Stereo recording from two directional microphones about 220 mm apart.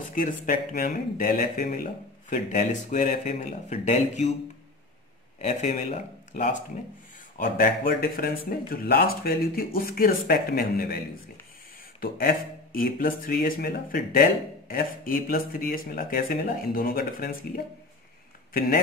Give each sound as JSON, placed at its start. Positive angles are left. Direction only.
{"t": 0.1, "sound": "speech", "side_deg": 40}
{"t": 5.4, "sound": "speech", "side_deg": 30}
{"t": 12.0, "sound": "speech", "side_deg": 40}
{"t": 18.5, "sound": "speech", "side_deg": 40}